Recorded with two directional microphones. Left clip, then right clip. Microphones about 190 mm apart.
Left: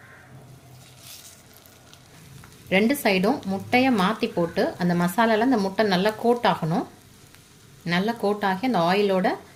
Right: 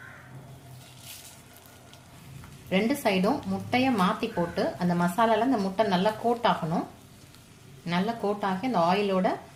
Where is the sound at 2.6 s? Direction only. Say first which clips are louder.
Left 5 dB; 45° left (ahead or behind).